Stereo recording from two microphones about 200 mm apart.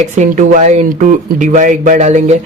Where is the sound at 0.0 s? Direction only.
40° right (ahead or behind).